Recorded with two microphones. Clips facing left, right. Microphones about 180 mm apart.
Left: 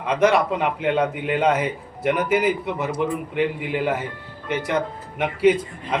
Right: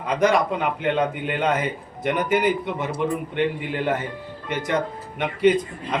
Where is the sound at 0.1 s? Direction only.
5° left (ahead or behind).